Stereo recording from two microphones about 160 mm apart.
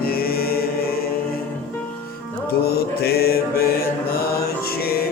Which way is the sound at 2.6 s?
80° left.